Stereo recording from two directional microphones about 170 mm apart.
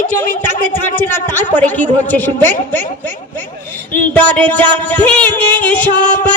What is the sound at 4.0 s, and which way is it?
Music, 10° left (ahead or behind).